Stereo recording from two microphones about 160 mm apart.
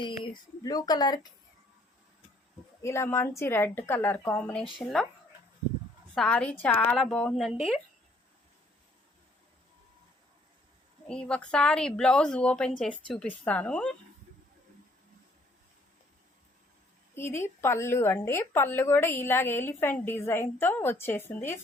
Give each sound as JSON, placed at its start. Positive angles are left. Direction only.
{"t": 0.6, "sound": "speech", "side_deg": 25}
{"t": 2.8, "sound": "a woman's voice", "side_deg": 15}
{"t": 6.1, "sound": "a woman's voice", "side_deg": 5}
{"t": 11.1, "sound": "a woman's voice", "side_deg": 5}
{"t": 17.2, "sound": "a woman's voice", "side_deg": 15}